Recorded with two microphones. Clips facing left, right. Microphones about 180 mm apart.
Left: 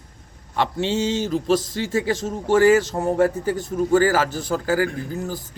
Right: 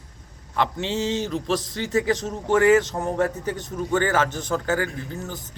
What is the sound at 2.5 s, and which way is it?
Speech, 35° left (ahead or behind).